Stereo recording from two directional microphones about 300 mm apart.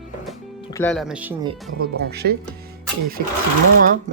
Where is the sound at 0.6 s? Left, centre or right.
Centre.